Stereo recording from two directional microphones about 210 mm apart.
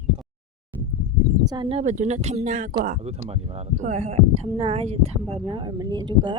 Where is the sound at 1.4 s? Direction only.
20° right (ahead or behind).